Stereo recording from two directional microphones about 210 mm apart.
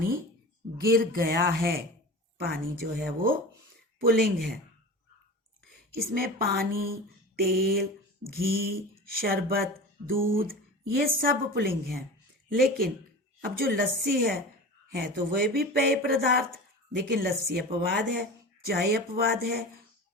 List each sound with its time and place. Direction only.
0.8 s speech: 45° right (ahead or behind)
5.9 s speech: 45° right (ahead or behind)